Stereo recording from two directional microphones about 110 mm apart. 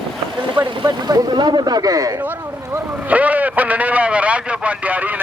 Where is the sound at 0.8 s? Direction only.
40° right (ahead or behind).